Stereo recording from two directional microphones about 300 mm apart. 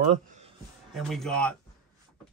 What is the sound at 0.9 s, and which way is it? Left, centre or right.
Speech, centre.